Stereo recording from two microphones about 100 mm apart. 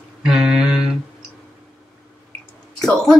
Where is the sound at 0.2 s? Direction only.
5° right (ahead or behind).